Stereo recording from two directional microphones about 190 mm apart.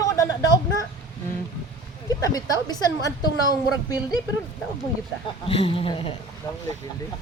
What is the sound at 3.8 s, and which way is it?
Speech, 20° left (ahead or behind).